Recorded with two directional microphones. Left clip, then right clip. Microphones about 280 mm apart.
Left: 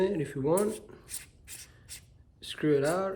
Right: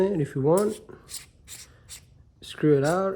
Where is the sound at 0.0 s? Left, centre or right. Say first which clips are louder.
Right 5 dB; centre.